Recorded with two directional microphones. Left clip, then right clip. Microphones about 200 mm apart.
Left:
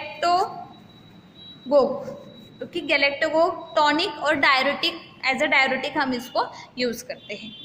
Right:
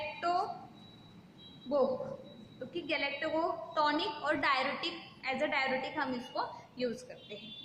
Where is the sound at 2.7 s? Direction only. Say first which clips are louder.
Left 14 dB; 50° left (ahead or behind).